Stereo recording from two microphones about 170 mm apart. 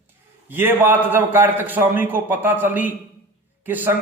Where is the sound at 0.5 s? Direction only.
15° right (ahead or behind).